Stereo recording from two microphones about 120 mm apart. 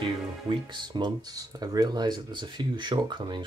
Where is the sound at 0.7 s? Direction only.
40° right (ahead or behind).